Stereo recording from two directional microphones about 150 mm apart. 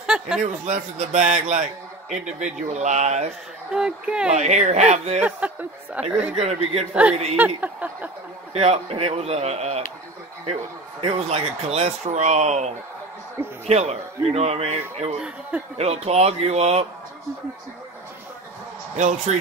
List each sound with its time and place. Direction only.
0.0 s a sound: 5° right (ahead or behind)
0.4 s speech: 50° right (ahead or behind)
3.7 s speech: 5° right (ahead or behind)
4.4 s speech: 50° right (ahead or behind)
5.2 s speech: 10° right (ahead or behind)
6.3 s speech: 45° right (ahead or behind)
6.9 s speech: 10° right (ahead or behind)
8.5 s speech: 45° right (ahead or behind)
11.0 s speech: 40° right (ahead or behind)
15.1 s speech: 5° right (ahead or behind)
15.8 s speech: 45° right (ahead or behind)
18.9 s speech: 50° right (ahead or behind)